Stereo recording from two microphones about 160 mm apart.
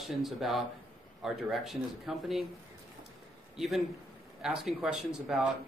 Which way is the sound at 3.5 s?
Centre (ahead or behind).